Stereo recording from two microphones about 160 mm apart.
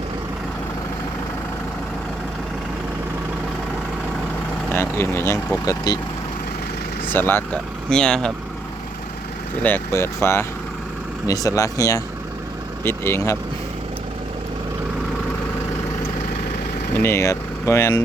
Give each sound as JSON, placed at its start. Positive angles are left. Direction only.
{"t": 4.7, "sound": "speech", "side_deg": 15}
{"t": 7.1, "sound": "speech", "side_deg": 15}
{"t": 9.6, "sound": "speech", "side_deg": 15}
{"t": 17.0, "sound": "speech", "side_deg": 15}